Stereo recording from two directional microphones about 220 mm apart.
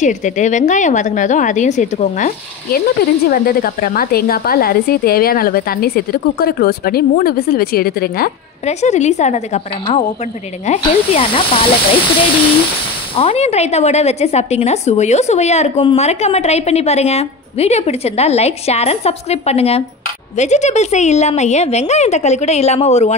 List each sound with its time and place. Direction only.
0.0 s a woman's voice: 35° left (ahead or behind)
8.6 s a woman's voice: 30° left (ahead or behind)
13.1 s a woman's voice: 25° left (ahead or behind)